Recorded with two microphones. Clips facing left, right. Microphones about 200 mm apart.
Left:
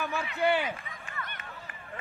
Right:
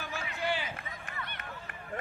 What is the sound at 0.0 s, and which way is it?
Run, 60° left (ahead or behind).